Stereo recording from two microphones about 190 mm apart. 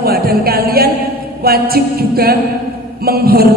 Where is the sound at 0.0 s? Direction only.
55° right (ahead or behind).